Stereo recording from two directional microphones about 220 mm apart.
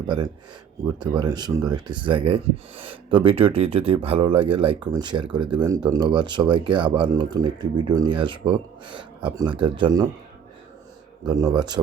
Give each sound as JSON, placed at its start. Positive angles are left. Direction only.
{"t": 0.9, "sound": "speech", "side_deg": -20}
{"t": 11.3, "sound": "speech", "side_deg": -15}